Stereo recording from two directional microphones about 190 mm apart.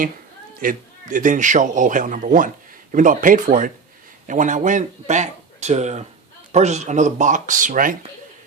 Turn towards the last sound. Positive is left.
turn(degrees=-45)  # may be behind; listen again after turning